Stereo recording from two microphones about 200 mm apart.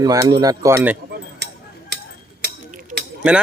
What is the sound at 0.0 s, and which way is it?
Speech, 20° right (ahead or behind).